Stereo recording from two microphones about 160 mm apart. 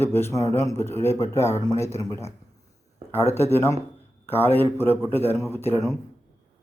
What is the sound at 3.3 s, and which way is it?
Speech, 15° left (ahead or behind).